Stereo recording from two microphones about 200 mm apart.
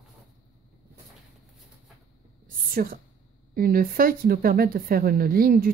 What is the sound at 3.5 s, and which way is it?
A woman's voice, 45° right (ahead or behind).